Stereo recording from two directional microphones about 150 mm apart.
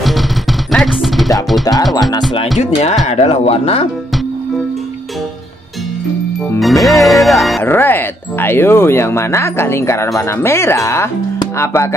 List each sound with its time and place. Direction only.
0.7 s music: centre (ahead or behind)
1.6 s music: 25° left (ahead or behind)
3.1 s speech: 40° left (ahead or behind)
6.6 s speech: centre (ahead or behind)
7.6 s speech: 15° left (ahead or behind)